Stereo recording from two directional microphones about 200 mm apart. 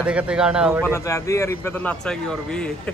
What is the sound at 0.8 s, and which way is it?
A man's voice, 15° left (ahead or behind).